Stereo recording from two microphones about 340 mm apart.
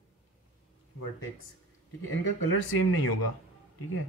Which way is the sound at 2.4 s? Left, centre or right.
Left.